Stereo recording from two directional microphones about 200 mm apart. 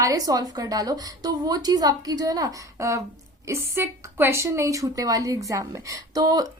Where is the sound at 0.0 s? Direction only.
15° right (ahead or behind).